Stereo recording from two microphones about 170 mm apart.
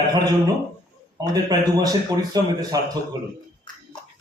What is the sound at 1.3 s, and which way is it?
A man's voice, 20° right (ahead or behind).